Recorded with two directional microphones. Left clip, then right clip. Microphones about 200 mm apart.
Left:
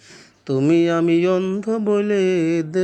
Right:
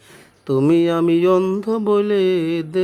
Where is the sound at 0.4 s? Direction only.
5° right (ahead or behind).